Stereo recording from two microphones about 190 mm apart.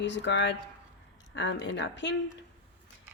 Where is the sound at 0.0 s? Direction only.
70° left (ahead or behind).